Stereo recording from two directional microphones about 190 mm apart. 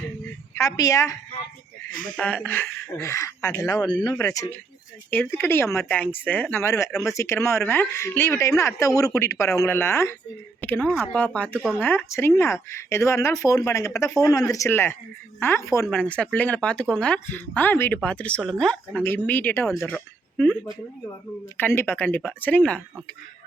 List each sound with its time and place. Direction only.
0.5 s speech: 20° left (ahead or behind)
1.9 s speech: 45° left (ahead or behind)
2.1 s speech: 10° left (ahead or behind)
21.6 s speech: 10° left (ahead or behind)